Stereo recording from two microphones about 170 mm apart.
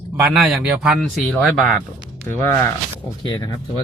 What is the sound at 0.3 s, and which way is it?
Speech, 5° right (ahead or behind).